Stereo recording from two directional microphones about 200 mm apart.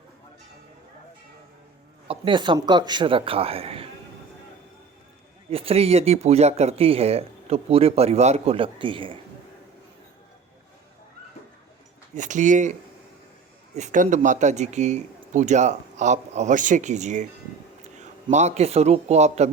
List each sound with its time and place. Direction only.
2.0 s speech: 25° right (ahead or behind)
5.5 s speech: 30° right (ahead or behind)
12.1 s speech: 40° right (ahead or behind)
13.7 s a man's voice: 35° right (ahead or behind)